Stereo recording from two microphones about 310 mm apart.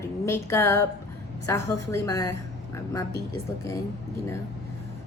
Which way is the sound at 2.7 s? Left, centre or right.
Centre.